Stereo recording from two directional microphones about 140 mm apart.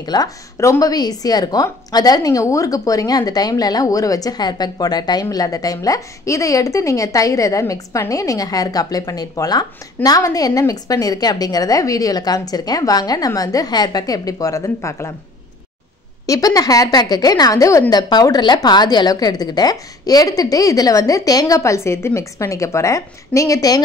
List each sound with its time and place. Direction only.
0.0 s a woman's voice: 30° left (ahead or behind)
16.3 s a woman's voice: 25° left (ahead or behind)